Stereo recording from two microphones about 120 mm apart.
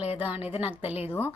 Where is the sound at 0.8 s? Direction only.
60° left (ahead or behind).